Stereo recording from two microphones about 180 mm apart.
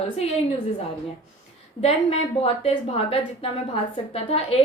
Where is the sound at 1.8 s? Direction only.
35° left (ahead or behind).